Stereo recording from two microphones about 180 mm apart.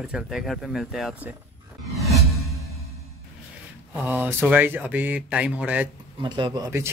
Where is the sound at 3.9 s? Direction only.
10° right (ahead or behind).